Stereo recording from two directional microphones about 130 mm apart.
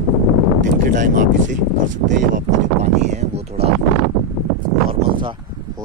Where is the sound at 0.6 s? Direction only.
80° right; by 3.7 s 55° right (ahead or behind).